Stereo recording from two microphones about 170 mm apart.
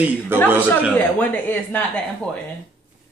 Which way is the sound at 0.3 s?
10° right (ahead or behind).